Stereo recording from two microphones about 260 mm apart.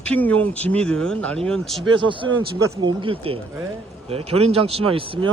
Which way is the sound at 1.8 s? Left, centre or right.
Centre.